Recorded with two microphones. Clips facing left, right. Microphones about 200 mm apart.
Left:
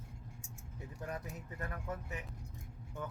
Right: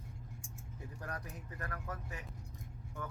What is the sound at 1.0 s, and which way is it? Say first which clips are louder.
Speech: left 3 dB; 20° left (ahead or behind).